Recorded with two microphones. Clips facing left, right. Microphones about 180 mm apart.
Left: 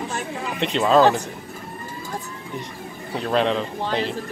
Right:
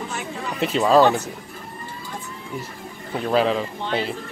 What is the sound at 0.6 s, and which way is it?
Speech, 5° right (ahead or behind).